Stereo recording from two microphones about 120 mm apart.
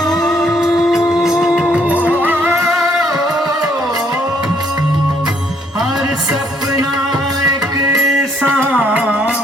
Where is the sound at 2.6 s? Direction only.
5° right (ahead or behind).